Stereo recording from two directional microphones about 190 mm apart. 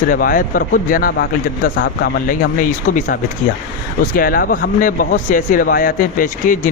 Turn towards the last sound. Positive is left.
turn(degrees=45)  # may be behind; listen again after turning